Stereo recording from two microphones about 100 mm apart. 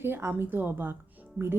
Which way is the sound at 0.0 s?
25° right (ahead or behind).